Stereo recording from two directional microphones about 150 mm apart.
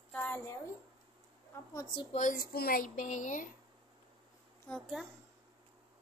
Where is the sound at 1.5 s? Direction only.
25° left (ahead or behind).